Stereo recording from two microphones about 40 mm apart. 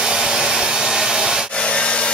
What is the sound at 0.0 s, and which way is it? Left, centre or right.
Hair dryer, centre.